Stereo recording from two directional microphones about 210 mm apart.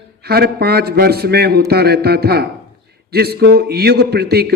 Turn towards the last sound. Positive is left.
turn(degrees=-50)  # may be behind; listen again after turning